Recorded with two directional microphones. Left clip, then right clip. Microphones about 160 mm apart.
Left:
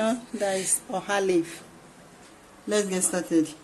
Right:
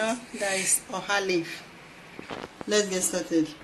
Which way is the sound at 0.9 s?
55° left (ahead or behind).